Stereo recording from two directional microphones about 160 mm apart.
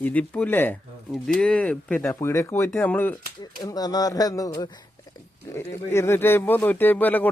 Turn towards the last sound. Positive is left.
turn(degrees=10)  # may be behind; listen again after turning